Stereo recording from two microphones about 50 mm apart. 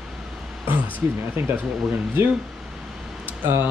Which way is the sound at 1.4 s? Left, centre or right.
Right.